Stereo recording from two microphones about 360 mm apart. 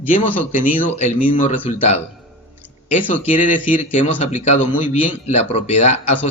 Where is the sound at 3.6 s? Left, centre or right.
Left.